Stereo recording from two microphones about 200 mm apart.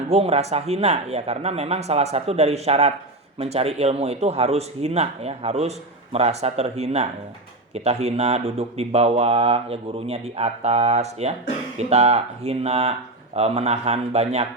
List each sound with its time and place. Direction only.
0.1 s speech: 30° right (ahead or behind)